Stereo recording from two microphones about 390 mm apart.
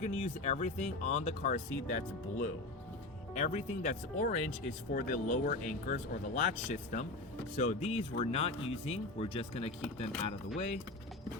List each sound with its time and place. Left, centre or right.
0.0 s speech: centre
3.3 s speech: centre